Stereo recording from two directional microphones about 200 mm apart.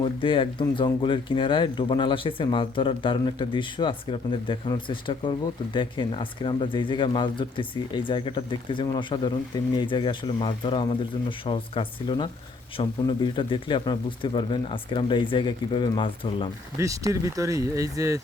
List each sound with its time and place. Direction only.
0.0 s speech: 25° left (ahead or behind)
16.7 s speech: 15° right (ahead or behind)